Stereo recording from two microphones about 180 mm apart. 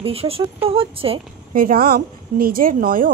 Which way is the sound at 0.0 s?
30° right (ahead or behind).